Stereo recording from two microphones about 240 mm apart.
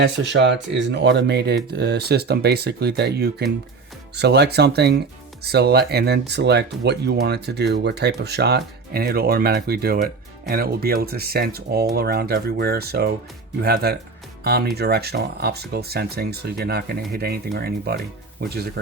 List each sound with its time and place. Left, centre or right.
0.0 s speech: right